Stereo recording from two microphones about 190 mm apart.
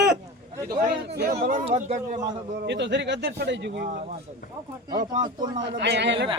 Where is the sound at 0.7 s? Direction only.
55° right (ahead or behind).